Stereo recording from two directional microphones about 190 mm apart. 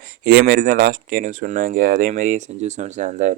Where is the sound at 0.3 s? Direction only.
50° right (ahead or behind).